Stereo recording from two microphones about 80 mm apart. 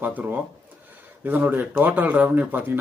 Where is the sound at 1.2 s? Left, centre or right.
Right.